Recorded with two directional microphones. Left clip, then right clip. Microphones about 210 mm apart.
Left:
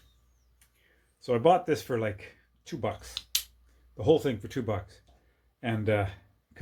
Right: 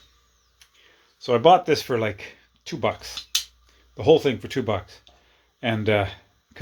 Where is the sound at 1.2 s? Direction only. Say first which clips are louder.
Right 7 dB; 25° right (ahead or behind).